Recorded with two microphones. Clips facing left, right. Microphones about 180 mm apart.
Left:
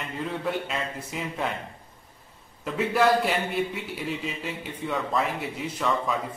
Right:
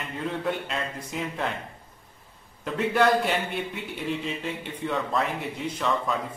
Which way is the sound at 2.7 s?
Centre (ahead or behind).